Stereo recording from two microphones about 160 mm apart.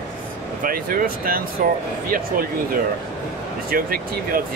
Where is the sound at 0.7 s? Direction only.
65° right (ahead or behind).